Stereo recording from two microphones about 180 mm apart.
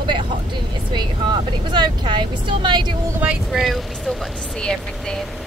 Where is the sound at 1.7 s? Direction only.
25° right (ahead or behind).